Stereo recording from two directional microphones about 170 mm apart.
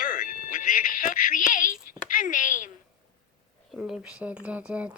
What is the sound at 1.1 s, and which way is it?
Child singing, 50° left (ahead or behind).